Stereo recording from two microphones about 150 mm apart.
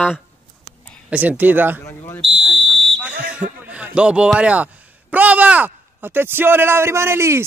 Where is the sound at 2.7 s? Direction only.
10° right (ahead or behind).